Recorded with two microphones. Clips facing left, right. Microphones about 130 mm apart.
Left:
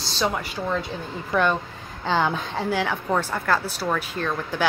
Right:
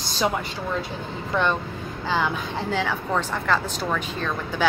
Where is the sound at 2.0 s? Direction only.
30° left (ahead or behind).